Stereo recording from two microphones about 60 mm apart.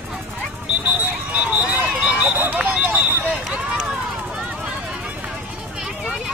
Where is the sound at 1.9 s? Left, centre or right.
Centre.